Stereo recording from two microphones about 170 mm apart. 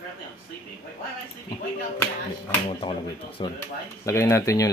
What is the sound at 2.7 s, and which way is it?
Speech, 30° left (ahead or behind).